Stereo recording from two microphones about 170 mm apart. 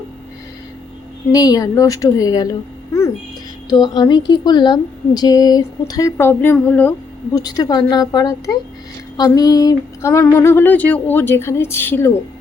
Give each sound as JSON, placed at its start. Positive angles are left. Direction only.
{"t": 1.3, "sound": "speech", "side_deg": 20}
{"t": 3.7, "sound": "speech", "side_deg": 25}
{"t": 7.3, "sound": "speech", "side_deg": 20}
{"t": 9.1, "sound": "music", "side_deg": 20}